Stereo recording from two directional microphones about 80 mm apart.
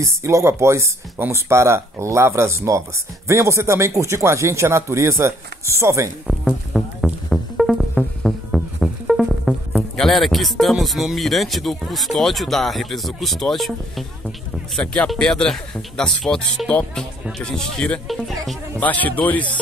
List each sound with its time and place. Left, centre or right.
0.0 s speech: right
6.7 s music: centre
9.9 s speech: centre